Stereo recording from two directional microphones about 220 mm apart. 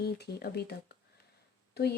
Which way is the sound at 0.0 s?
45° left (ahead or behind).